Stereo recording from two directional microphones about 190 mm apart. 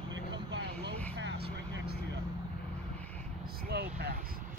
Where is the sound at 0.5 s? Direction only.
65° right (ahead or behind).